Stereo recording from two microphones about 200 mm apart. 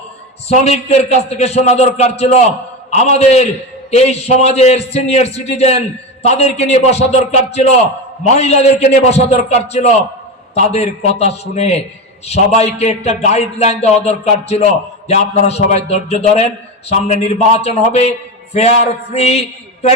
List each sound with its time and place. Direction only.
0.4 s a man's voice: 35° left (ahead or behind)